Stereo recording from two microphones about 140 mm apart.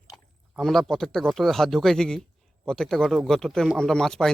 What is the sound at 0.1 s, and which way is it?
Speech, centre (ahead or behind).